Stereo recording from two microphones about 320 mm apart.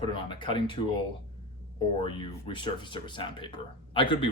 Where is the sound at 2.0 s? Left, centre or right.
Centre.